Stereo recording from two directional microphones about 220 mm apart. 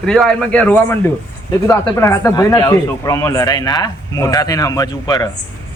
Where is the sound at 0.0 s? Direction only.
Centre (ahead or behind).